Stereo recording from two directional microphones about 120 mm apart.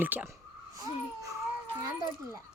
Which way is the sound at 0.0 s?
15° right (ahead or behind).